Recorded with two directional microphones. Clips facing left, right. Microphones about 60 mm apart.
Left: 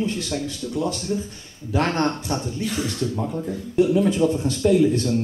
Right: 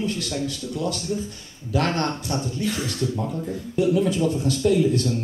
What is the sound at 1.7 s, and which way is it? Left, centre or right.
Speech, left.